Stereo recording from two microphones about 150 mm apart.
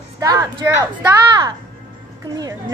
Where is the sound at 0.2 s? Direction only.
25° right (ahead or behind).